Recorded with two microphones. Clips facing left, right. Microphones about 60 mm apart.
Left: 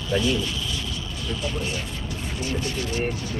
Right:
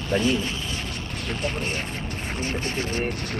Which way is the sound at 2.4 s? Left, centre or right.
Right.